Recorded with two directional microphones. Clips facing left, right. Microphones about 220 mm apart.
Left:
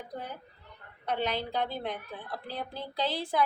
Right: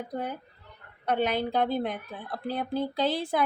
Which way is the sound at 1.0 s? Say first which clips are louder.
Right 5 dB; 50° right (ahead or behind).